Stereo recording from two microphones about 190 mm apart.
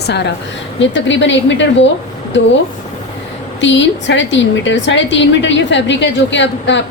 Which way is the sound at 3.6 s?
70° left (ahead or behind).